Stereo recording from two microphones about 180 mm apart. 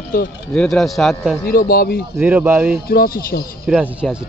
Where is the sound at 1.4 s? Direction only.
55° left (ahead or behind).